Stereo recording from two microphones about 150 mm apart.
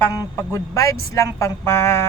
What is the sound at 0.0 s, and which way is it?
Speech, 20° left (ahead or behind).